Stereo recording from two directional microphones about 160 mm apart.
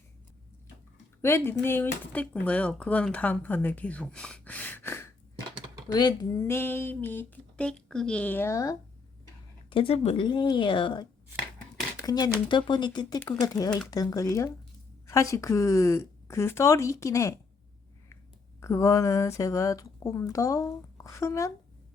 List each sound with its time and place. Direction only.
1.2 s speech: 15° left (ahead or behind)
5.9 s speech: 25° left (ahead or behind)
6.4 s speech: 15° left (ahead or behind)
9.6 s speech: 35° left (ahead or behind); by 17.4 s 20° left (ahead or behind)
18.6 s speech: 20° left (ahead or behind)